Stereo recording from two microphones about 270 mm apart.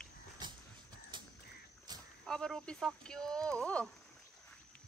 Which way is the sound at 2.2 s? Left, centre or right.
Centre.